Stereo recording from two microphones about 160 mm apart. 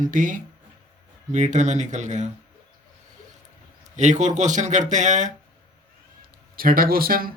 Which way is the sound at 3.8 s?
50° right (ahead or behind).